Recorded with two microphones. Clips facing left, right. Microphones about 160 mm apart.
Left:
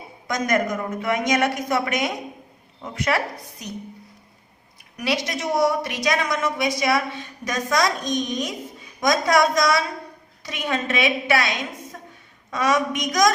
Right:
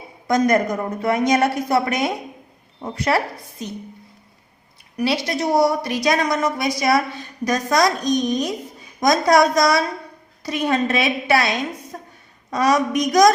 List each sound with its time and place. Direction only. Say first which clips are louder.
0.3 s a woman's voice: right 5 dB; 35° right (ahead or behind)
4.9 s a woman's voice: right 4 dB; 30° right (ahead or behind)